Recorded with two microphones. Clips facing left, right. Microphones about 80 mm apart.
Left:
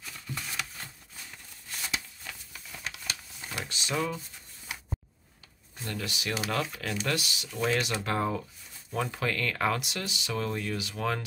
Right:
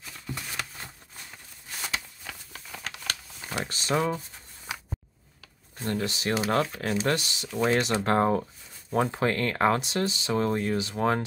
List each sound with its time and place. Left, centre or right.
2.5 s a sound: right
3.6 s speech: right
5.9 s speech: right